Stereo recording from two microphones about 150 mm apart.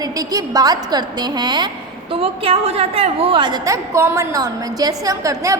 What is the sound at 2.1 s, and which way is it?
A woman's voice, 40° right (ahead or behind).